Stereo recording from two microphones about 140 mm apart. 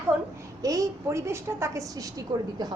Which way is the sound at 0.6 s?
25° right (ahead or behind).